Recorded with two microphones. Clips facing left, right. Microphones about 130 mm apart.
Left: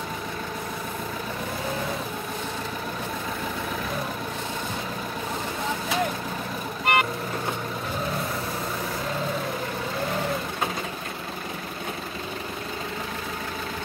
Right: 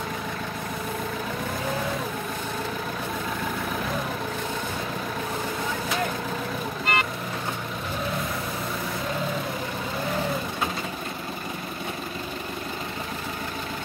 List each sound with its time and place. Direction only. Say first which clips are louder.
6.9 s vehicle: left 4 dB; 60° left (ahead or behind)